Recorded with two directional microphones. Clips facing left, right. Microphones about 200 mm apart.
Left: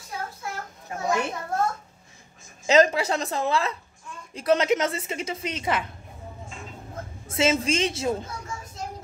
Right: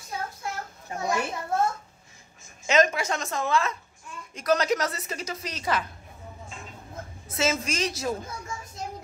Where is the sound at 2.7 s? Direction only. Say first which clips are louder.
Left 4 dB; 35° left (ahead or behind).